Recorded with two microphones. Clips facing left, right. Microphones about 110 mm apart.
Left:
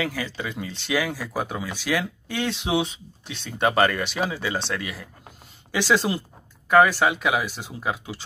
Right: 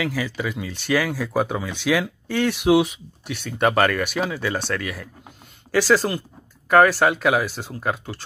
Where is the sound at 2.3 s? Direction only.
15° left (ahead or behind).